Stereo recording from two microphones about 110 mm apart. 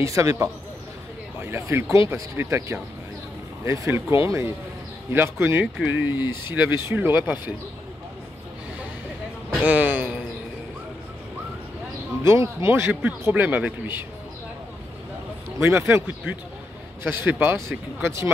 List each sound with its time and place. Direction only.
0.0 s speech: 30° right (ahead or behind)
9.5 s speech: 15° right (ahead or behind)
12.2 s speech: 25° right (ahead or behind)
15.6 s speech: 20° right (ahead or behind)